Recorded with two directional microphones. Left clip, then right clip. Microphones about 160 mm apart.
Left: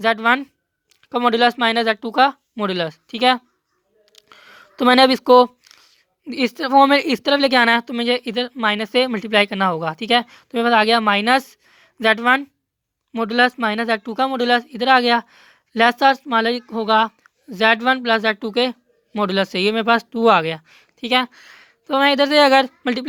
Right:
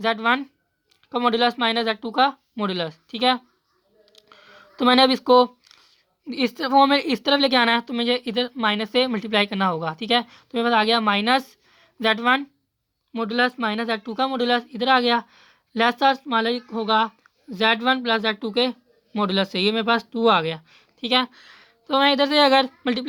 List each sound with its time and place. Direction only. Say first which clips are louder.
0.0 s speech: left 4 dB; 35° left (ahead or behind)
4.1 s a sound: left 4 dB; 35° left (ahead or behind)
6.2 s a woman's voice: left 3 dB; 10° left (ahead or behind)
6.9 s speech: left 4 dB; 40° left (ahead or behind)
13.2 s speech: left 5 dB; 45° left (ahead or behind)